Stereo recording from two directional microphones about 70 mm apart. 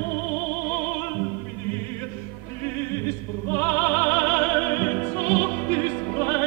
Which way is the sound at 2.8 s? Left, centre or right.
Left.